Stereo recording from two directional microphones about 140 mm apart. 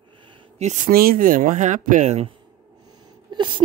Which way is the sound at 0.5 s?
55° right (ahead or behind).